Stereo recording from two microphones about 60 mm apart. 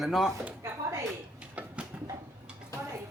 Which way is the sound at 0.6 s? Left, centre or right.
Right.